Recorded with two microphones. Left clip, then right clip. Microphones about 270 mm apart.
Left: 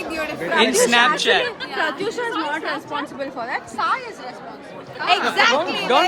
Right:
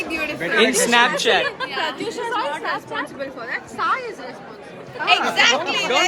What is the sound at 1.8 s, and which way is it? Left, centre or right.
Speech, left.